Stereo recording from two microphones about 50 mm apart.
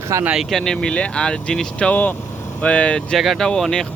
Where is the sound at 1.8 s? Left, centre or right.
Left.